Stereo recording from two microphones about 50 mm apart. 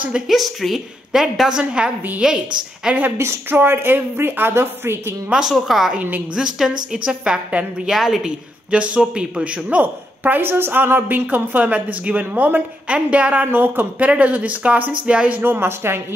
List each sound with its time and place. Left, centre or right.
0.3 s a woman's voice: centre
1.6 s a woman's voice: centre
3.4 s a woman's voice: right
5.3 s a woman's voice: centre
5.9 s a woman's voice: right
6.3 s a woman's voice: centre
8.6 s a woman's voice: right
10.5 s a woman's voice: right
12.8 s a woman's voice: right
13.5 s a woman's voice: right
14.0 s a woman's voice: right
15.4 s a woman's voice: right